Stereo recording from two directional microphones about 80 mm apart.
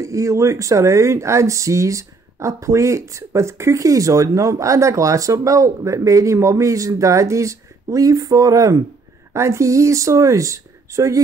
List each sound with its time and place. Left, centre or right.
0.0 s speech: right